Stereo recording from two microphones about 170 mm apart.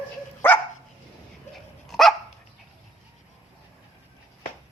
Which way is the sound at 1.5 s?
Centre (ahead or behind).